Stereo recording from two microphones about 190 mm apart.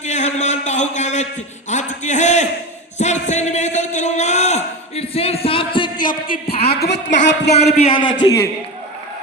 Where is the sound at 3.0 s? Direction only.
40° left (ahead or behind).